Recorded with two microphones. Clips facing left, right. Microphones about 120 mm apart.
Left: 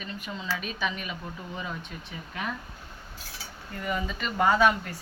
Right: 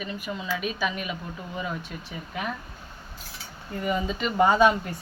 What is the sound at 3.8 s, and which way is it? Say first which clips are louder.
Speech: right 4 dB; 20° right (ahead or behind).